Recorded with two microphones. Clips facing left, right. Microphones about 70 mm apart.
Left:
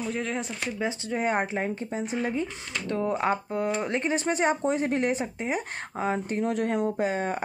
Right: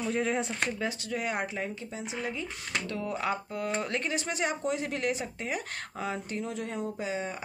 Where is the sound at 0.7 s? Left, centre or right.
Left.